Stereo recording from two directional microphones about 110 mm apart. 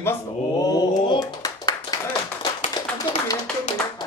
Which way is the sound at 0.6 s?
35° left (ahead or behind).